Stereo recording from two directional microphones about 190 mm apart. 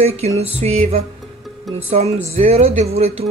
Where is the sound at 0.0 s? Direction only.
35° right (ahead or behind).